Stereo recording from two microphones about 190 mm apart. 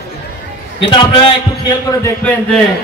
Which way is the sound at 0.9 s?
25° left (ahead or behind).